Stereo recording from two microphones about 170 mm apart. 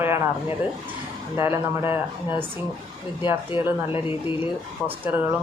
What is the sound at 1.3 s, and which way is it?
Speech, 15° right (ahead or behind).